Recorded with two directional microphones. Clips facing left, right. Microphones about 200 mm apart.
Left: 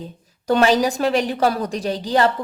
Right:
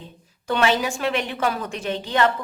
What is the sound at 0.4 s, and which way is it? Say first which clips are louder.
A woman's voice: left 5 dB; 40° left (ahead or behind).